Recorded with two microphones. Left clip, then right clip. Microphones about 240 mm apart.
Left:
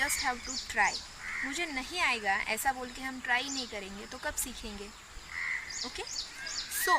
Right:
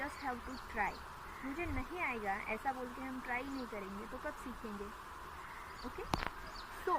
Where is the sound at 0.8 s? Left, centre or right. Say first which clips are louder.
Left 10 dB; left.